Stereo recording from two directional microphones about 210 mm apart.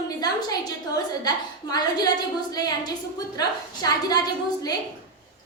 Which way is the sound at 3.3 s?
20° left (ahead or behind).